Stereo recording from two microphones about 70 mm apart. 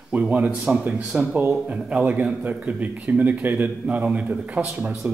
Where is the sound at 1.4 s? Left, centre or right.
Right.